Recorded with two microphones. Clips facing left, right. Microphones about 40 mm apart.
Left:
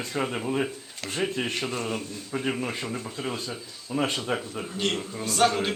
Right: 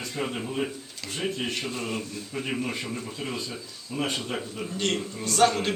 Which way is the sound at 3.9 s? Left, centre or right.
Left.